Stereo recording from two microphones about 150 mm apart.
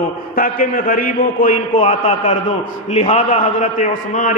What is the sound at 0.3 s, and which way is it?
A man's voice, 70° left (ahead or behind).